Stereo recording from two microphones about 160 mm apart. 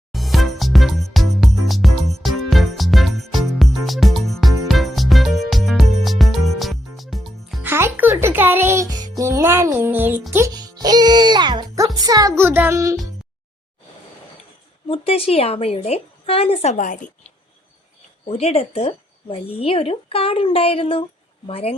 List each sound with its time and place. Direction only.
0.1 s music: centre (ahead or behind)
7.6 s music: 15° right (ahead or behind)
14.8 s a woman's voice: 35° left (ahead or behind)
16.7 s a woman's voice: 55° left (ahead or behind)
18.3 s speech: 40° left (ahead or behind)